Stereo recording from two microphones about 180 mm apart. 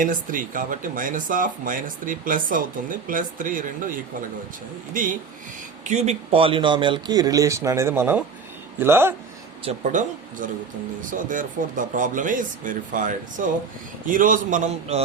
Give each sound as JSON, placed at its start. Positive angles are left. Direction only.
{"t": 0.0, "sound": "speech", "side_deg": -50}
{"t": 4.9, "sound": "speech", "side_deg": -50}
{"t": 9.6, "sound": "speech", "side_deg": -45}